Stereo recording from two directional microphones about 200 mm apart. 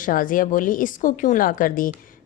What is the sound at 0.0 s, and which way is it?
A woman's voice, 45° left (ahead or behind).